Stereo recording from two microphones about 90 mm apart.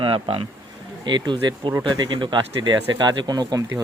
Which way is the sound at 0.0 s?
75° right (ahead or behind).